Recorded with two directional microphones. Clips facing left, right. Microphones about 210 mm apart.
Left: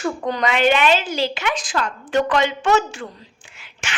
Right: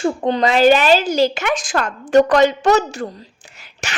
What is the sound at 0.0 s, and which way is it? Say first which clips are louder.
Speech: right 5 dB; 30° right (ahead or behind).